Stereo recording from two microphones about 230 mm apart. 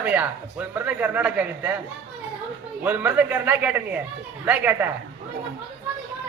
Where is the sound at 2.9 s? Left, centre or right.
Centre.